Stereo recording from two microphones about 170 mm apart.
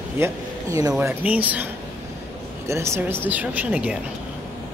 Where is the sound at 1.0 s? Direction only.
10° right (ahead or behind).